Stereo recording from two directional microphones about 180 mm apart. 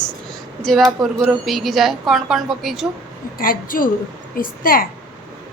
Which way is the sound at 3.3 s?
50° left (ahead or behind).